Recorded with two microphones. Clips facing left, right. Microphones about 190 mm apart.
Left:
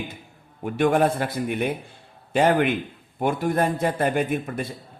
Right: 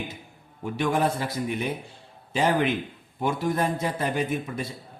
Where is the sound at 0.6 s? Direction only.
55° left (ahead or behind).